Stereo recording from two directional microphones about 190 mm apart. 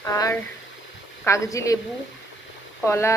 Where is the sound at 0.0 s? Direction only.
15° left (ahead or behind).